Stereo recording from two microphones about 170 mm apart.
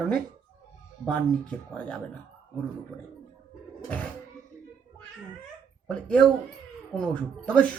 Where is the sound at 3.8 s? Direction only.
10° left (ahead or behind).